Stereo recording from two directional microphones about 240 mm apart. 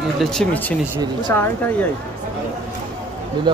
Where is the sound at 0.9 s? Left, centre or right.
Centre.